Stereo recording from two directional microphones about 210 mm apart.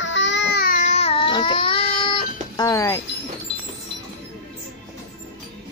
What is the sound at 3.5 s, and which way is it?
Music, 60° left (ahead or behind).